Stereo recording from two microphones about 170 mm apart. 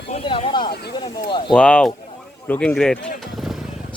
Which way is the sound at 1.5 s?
5° left (ahead or behind).